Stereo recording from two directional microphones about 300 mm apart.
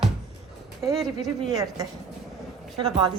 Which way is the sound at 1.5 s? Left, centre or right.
Centre.